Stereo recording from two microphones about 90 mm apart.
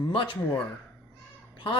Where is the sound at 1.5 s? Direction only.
65° left (ahead or behind).